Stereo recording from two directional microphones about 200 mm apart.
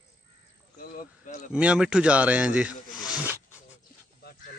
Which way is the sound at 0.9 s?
40° left (ahead or behind).